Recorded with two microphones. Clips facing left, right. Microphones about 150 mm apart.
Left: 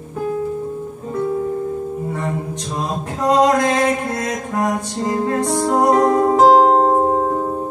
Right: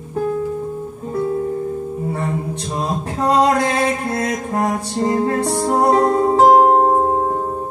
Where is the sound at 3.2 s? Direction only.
30° right (ahead or behind).